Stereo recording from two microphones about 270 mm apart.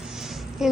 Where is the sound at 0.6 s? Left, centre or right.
Centre.